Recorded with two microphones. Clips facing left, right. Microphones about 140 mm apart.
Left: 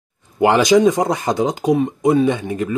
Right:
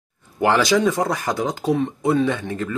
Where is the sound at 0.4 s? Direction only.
20° left (ahead or behind).